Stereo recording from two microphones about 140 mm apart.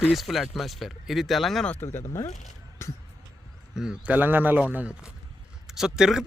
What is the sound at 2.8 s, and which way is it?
Music, 20° left (ahead or behind).